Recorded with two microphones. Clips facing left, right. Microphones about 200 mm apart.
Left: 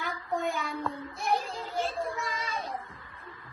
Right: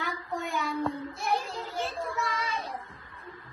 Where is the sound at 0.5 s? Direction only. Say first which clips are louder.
Right 3 dB; 50° left (ahead or behind).